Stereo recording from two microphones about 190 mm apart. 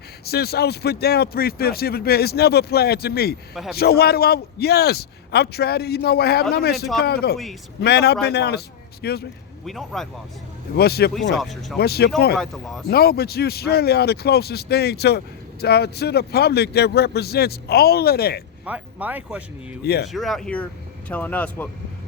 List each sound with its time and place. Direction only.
0.3 s speech: 55° left (ahead or behind)
3.5 s speech: centre (ahead or behind)
3.8 s speech: 55° left (ahead or behind)
9.6 s speech: centre (ahead or behind)
10.8 s speech: 55° left (ahead or behind)
11.1 s speech: centre (ahead or behind)
11.8 s speech: 55° left (ahead or behind)
12.4 s speech: centre (ahead or behind)
12.9 s speech: 55° left (ahead or behind)
18.6 s speech: 10° right (ahead or behind)
19.8 s speech: 55° left (ahead or behind)
20.1 s speech: centre (ahead or behind)